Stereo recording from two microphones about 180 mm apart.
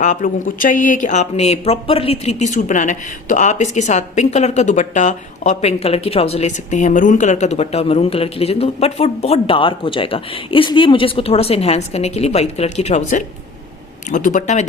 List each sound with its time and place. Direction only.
0.0 s speech: 45° left (ahead or behind)